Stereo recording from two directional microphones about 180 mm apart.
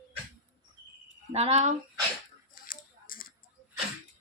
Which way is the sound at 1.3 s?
35° right (ahead or behind).